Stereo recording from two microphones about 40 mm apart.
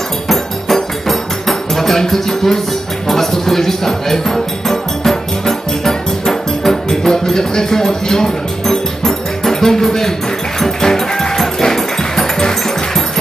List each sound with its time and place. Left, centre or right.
0.3 s music: centre